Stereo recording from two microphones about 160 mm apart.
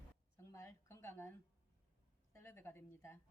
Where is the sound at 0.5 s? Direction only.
15° left (ahead or behind).